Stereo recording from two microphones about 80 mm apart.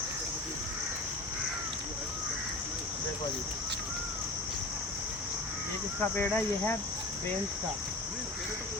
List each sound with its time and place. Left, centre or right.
6.0 s speech: left